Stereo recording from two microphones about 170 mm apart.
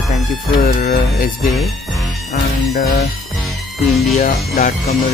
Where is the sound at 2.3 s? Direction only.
60° left (ahead or behind).